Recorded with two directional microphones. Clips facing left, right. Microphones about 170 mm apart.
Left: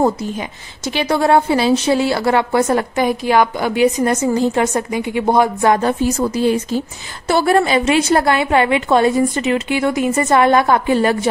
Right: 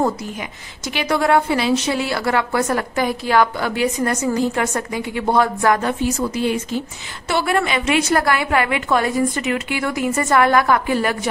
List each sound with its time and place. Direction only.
0.0 s a woman's voice: 25° left (ahead or behind)
5.9 s a woman's voice: 40° left (ahead or behind)